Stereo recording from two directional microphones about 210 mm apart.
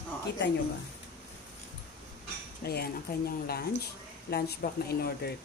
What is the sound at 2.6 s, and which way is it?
Speech, 50° left (ahead or behind).